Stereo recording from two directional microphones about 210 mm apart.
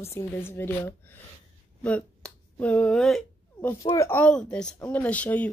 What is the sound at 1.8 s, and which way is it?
Finger snapping, 5° left (ahead or behind).